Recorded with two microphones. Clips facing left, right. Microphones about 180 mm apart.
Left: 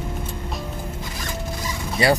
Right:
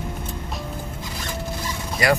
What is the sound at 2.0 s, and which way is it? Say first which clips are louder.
Speech: left 1 dB; 30° left (ahead or behind).